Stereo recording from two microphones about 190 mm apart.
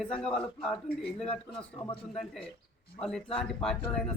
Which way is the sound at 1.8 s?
30° left (ahead or behind).